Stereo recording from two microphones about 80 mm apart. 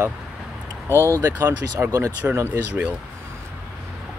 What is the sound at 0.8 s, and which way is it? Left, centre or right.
Speech, right.